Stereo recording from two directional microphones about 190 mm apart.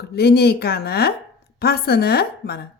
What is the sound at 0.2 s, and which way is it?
A woman's voice, 60° left (ahead or behind).